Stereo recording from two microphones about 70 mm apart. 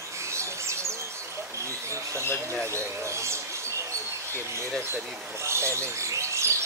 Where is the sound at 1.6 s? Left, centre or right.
Right.